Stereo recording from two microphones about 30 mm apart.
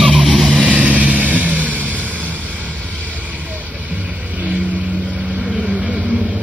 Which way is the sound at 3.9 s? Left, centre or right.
Right.